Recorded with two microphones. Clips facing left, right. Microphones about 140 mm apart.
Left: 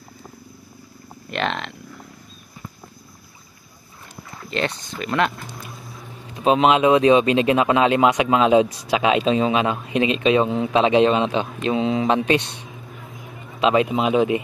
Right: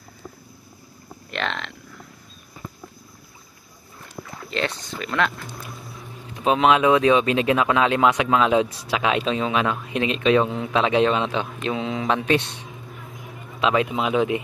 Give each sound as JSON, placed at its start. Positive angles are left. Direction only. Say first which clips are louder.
{"t": 1.3, "sound": "speech", "louder": "left 4 dB", "side_deg": 10}
{"t": 4.5, "sound": "speech", "louder": "left 2 dB", "side_deg": 0}
{"t": 6.4, "sound": "speech", "louder": "left 2 dB", "side_deg": 20}
{"t": 13.6, "sound": "a man's voice", "louder": "left 3 dB", "side_deg": 20}